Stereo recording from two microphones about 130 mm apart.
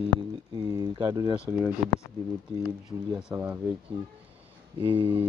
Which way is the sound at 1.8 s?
5° right (ahead or behind).